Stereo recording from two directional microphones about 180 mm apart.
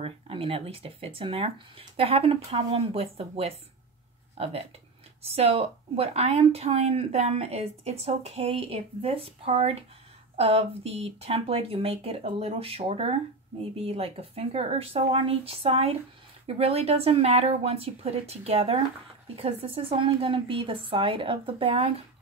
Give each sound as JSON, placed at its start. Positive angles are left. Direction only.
{"t": 0.0, "sound": "a woman's voice", "side_deg": -30}